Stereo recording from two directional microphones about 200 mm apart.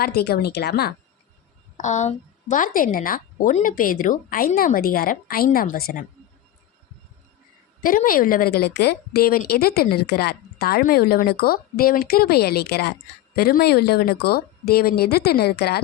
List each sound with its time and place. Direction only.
0.0 s a woman's voice: 50° left (ahead or behind)
1.8 s a woman's voice: 35° left (ahead or behind)
7.8 s a woman's voice: 45° left (ahead or behind)